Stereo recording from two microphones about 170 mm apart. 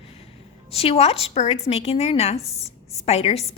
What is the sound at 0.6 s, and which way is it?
A woman's voice, 35° left (ahead or behind).